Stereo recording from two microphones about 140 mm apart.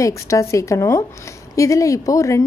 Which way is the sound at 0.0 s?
20° left (ahead or behind).